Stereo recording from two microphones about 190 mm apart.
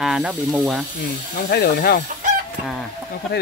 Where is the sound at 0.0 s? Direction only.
Centre (ahead or behind).